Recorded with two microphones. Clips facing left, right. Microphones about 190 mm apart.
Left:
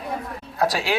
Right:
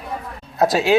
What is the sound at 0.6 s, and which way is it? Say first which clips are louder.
Speech: right 6 dB; 20° right (ahead or behind).